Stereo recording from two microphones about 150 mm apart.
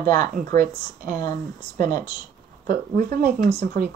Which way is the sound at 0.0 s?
70° right (ahead or behind).